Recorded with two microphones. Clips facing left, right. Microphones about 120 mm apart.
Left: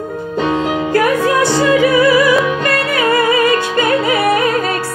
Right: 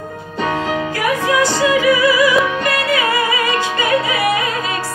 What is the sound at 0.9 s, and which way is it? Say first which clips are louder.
Music: left 5 dB; 55° left (ahead or behind).